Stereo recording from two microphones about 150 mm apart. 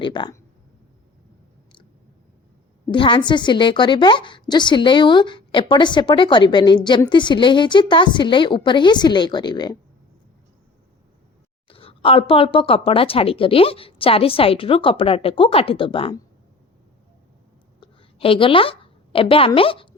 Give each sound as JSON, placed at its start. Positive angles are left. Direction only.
{"t": 0.0, "sound": "a woman's voice", "side_deg": 30}
{"t": 2.9, "sound": "a woman's voice", "side_deg": 35}
{"t": 11.7, "sound": "a woman's voice", "side_deg": 40}
{"t": 17.7, "sound": "a sound", "side_deg": 35}